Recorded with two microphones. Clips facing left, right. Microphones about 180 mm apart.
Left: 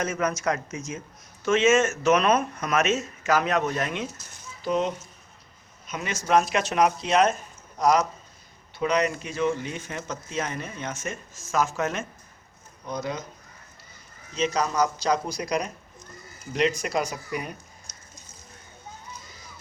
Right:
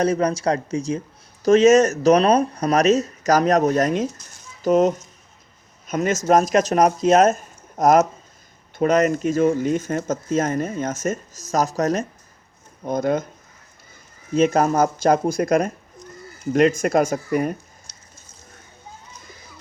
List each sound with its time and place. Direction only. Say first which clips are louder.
0.0 s speech: right 7 dB; 35° right (ahead or behind)
12.8 s speech: right 10 dB; 50° right (ahead or behind)
14.3 s speech: right 8 dB; 50° right (ahead or behind)